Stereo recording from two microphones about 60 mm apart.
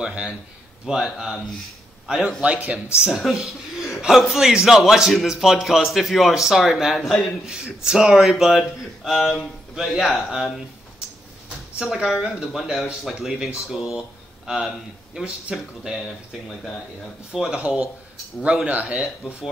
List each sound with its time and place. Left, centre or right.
0.0 s a man's voice: centre
3.1 s a man's voice: centre
7.4 s a man's voice: centre
9.0 s speech: centre
11.8 s a man's voice: centre
17.3 s a man's voice: centre
17.6 s speech: centre